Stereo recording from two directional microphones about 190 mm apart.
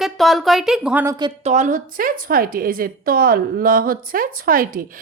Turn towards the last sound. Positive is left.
turn(degrees=-45)  # may be behind; listen again after turning